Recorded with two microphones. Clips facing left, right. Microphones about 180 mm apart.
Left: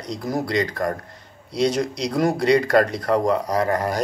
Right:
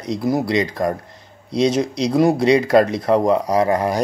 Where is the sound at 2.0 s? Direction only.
25° right (ahead or behind).